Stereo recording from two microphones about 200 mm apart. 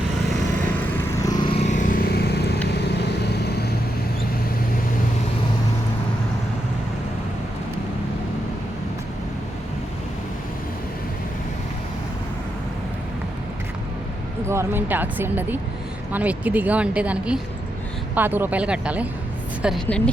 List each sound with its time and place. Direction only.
1.2 s vehicle: 20° left (ahead or behind)
1.5 s vehicle: 35° left (ahead or behind); by 3.7 s 55° left (ahead or behind)
14.4 s a woman's voice: 15° right (ahead or behind)